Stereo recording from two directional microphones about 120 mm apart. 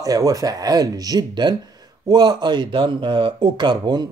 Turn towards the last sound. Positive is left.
turn(degrees=-35)  # may be behind; listen again after turning